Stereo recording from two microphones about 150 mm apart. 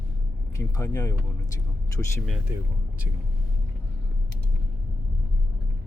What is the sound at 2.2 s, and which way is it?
Speech, centre (ahead or behind).